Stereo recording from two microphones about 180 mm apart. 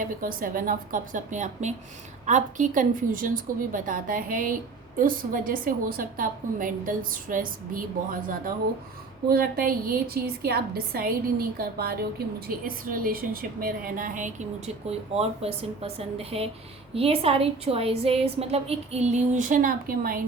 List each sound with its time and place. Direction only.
0.0 s a woman's voice: 50° right (ahead or behind)